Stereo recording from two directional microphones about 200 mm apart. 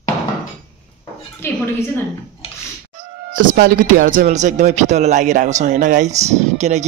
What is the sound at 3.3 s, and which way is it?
Speech, 40° right (ahead or behind).